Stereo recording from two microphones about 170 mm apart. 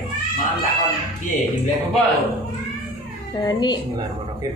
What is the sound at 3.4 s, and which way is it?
Speech, 25° left (ahead or behind).